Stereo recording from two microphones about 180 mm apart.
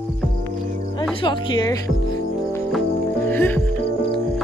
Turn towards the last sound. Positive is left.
turn(degrees=10)  # may be behind; listen again after turning